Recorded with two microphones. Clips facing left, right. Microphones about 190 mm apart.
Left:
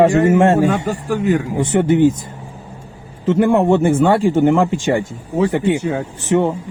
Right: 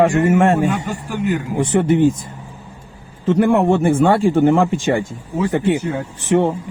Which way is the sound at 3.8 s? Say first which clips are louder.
Even; 20° left (ahead or behind).